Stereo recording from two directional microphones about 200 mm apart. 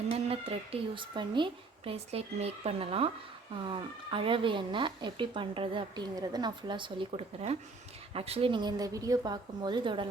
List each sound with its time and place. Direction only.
0.1 s speech: 30° right (ahead or behind)